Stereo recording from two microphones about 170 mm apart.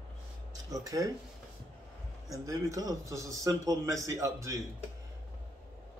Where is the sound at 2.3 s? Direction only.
20° right (ahead or behind).